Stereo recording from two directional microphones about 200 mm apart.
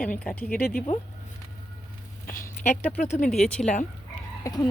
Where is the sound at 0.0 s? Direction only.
5° left (ahead or behind).